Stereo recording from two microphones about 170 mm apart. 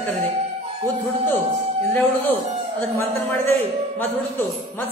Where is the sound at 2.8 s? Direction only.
15° left (ahead or behind).